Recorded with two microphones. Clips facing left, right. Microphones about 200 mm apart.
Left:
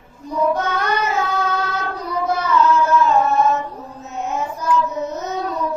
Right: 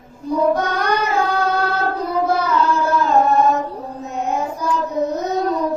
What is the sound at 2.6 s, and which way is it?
Carnatic music, 35° right (ahead or behind).